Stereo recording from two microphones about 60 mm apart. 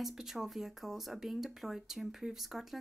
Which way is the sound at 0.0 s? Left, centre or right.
Centre.